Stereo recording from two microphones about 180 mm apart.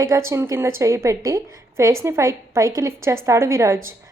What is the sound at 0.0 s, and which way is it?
A woman's voice, 15° right (ahead or behind).